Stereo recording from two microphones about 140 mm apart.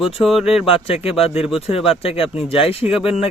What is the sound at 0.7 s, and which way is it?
Speech, 45° left (ahead or behind).